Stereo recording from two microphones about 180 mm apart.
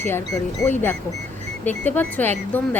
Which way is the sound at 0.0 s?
15° left (ahead or behind).